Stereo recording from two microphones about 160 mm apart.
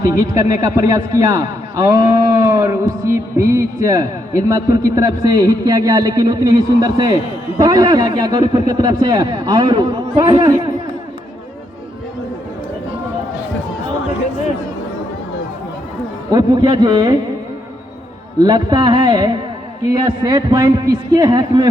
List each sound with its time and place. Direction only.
0.0 s a man's voice: 20° right (ahead or behind)
16.3 s a man's voice: 25° right (ahead or behind)
18.3 s a man's voice: 25° right (ahead or behind)